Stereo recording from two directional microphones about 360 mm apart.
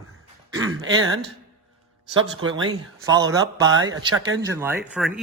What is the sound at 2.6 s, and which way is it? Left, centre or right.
A man's voice, centre.